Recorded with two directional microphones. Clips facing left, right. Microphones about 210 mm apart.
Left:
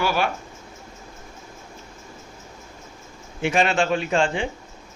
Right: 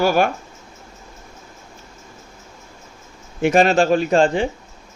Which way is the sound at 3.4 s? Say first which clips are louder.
Right 6 dB; 40° right (ahead or behind).